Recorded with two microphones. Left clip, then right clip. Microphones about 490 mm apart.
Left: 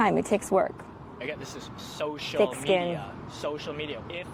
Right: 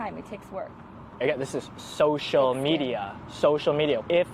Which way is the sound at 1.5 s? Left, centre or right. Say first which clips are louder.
Right 9 dB; right.